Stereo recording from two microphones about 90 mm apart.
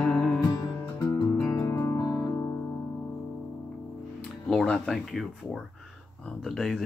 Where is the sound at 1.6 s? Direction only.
35° left (ahead or behind).